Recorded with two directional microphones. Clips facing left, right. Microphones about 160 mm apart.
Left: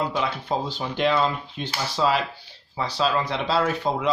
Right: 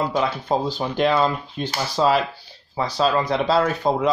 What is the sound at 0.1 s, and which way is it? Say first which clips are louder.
Speech: right 4 dB; 40° right (ahead or behind).